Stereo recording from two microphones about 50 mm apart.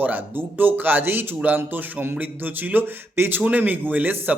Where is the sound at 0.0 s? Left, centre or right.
Right.